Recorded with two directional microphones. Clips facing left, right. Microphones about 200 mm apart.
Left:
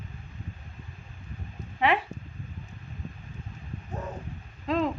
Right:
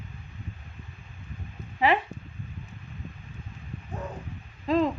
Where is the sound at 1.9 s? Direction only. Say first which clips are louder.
Right 1 dB; centre (ahead or behind).